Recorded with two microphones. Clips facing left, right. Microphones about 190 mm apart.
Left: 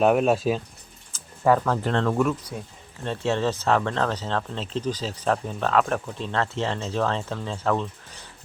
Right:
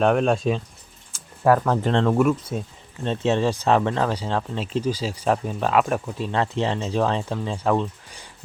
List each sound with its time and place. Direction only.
0.0 s speech: 5° left (ahead or behind)
1.6 s speech: 20° right (ahead or behind)